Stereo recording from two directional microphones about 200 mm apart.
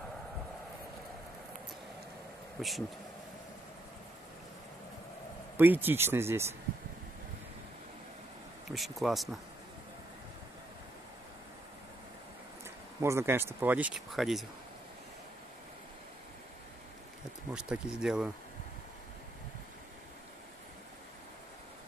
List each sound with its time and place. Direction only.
2.6 s speech: centre (ahead or behind)
5.6 s speech: 10° right (ahead or behind)
8.6 s speech: centre (ahead or behind)
12.6 s speech: 15° right (ahead or behind)
17.6 s speech: 5° right (ahead or behind)